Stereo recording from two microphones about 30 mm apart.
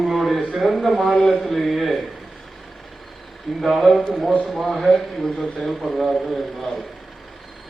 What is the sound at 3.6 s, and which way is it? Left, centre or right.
A man's voice, centre.